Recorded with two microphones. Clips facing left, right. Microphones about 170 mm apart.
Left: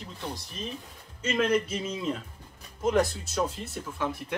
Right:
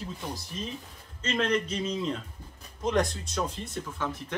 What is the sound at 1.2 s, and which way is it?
A man's voice, 10° left (ahead or behind).